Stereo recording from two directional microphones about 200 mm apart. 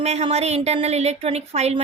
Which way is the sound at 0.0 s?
35° right (ahead or behind).